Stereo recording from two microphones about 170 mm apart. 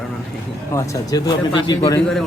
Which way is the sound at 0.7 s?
20° left (ahead or behind).